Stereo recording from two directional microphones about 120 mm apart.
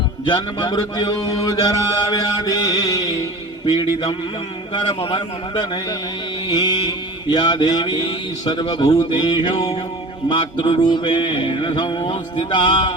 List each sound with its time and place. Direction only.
0.3 s mantra: 40° left (ahead or behind)
4.7 s a man's voice: 45° left (ahead or behind)
6.5 s mantra: 40° left (ahead or behind)